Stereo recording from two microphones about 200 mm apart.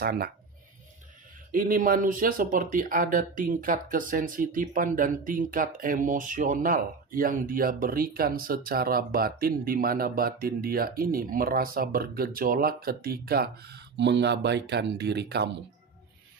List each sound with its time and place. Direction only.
0.0 s speech: 50° right (ahead or behind)
1.5 s speech: 45° right (ahead or behind)